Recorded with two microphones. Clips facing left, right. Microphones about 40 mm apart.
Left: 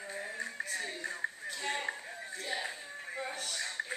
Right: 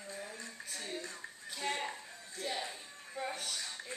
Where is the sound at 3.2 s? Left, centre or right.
Centre.